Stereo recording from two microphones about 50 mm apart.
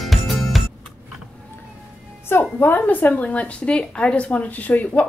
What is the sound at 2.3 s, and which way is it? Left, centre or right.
A woman's voice, left.